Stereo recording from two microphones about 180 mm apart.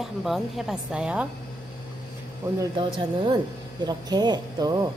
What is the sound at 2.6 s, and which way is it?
Speech, 25° right (ahead or behind).